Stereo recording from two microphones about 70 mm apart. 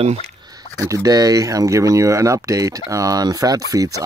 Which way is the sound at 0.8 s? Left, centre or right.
Right.